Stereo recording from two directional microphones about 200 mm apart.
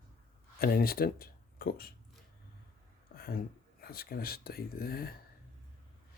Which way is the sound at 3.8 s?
50° left (ahead or behind).